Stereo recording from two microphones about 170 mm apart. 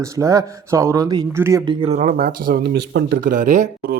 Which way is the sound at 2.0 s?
55° right (ahead or behind).